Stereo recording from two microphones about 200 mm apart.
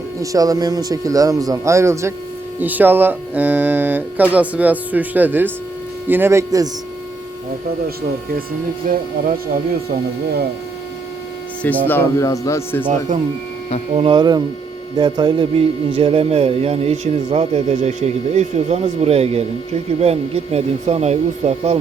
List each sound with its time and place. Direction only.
0.2 s speech: 20° right (ahead or behind)
8.9 s speech: 40° right (ahead or behind)
11.9 s speech: 15° left (ahead or behind)
13.9 s a man's voice: 25° right (ahead or behind)